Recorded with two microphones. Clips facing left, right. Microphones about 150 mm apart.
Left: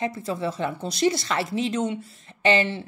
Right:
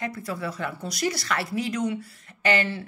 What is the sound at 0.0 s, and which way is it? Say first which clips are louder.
A woman's voice: left 4 dB; 25° left (ahead or behind).